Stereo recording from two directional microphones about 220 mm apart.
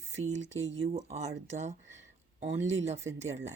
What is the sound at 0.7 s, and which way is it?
Speech, 30° right (ahead or behind).